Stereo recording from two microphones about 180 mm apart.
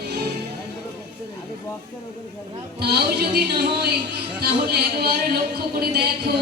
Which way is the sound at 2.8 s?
65° right (ahead or behind).